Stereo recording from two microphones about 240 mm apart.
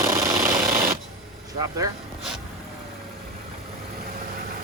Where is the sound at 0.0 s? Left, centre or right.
Centre.